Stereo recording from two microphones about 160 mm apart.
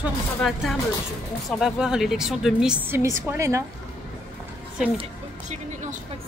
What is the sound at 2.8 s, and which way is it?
Speech, 15° right (ahead or behind).